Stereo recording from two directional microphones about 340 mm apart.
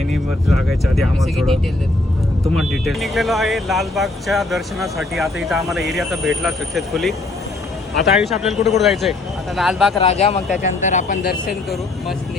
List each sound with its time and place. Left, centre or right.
0.1 s speech: centre
2.6 s speech: centre
9.9 s speech: centre